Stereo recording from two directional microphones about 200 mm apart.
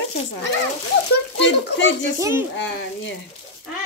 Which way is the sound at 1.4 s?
60° left (ahead or behind).